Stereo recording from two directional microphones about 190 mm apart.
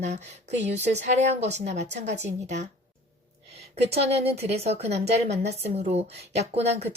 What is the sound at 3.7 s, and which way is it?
A woman's voice, 35° right (ahead or behind).